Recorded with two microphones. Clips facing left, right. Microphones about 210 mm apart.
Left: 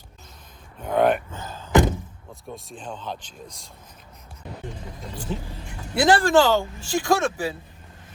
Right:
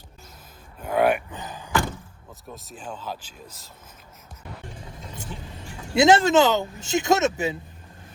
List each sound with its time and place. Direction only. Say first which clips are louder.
0.8 s a sound: left 1 dB; 5° right (ahead or behind)
2.5 s speech: left 2 dB; 5° right (ahead or behind)
5.1 s speech: left 8 dB; 25° right (ahead or behind)